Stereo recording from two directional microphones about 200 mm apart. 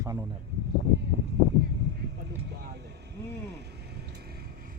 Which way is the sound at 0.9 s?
60° right (ahead or behind).